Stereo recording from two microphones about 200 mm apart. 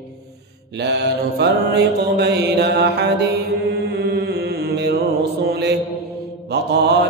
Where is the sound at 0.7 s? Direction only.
60° right (ahead or behind).